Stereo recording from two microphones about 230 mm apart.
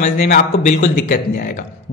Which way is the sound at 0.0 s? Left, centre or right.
Left.